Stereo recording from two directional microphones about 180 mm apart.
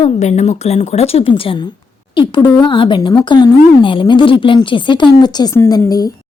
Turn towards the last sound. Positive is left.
turn(degrees=20)  # may be behind; listen again after turning